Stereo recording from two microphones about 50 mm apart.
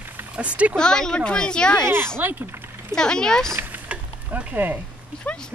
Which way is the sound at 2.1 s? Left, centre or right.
Right.